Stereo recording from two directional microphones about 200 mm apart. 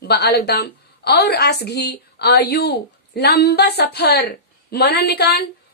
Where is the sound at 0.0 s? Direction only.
55° left (ahead or behind).